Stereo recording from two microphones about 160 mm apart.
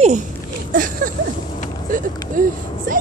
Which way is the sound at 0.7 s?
60° right (ahead or behind).